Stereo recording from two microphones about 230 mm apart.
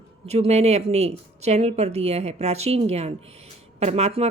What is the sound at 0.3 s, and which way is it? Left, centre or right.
A woman's voice, right.